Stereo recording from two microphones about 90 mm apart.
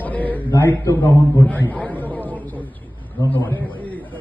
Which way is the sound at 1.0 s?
20° left (ahead or behind).